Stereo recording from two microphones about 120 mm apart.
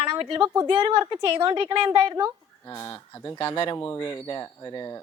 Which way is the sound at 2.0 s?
30° right (ahead or behind).